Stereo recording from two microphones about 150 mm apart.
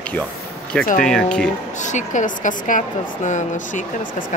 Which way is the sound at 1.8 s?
55° left (ahead or behind).